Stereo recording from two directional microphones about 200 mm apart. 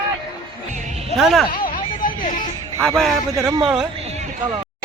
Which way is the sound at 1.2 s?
Centre (ahead or behind).